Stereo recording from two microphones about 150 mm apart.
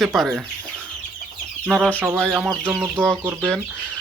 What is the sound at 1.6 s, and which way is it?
Speech, centre (ahead or behind).